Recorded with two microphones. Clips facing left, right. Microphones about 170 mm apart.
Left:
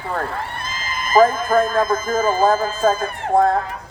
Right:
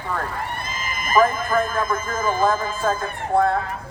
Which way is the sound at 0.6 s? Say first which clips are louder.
Left 1 dB; 90° left.